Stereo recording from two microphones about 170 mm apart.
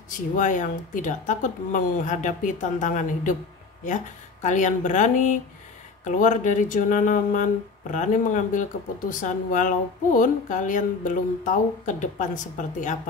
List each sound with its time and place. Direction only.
0.1 s speech: 50° left (ahead or behind)